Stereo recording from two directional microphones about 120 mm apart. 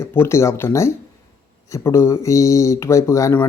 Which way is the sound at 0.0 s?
20° left (ahead or behind).